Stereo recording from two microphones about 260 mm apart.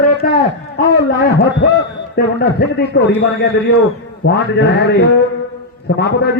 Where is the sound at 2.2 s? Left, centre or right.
Left.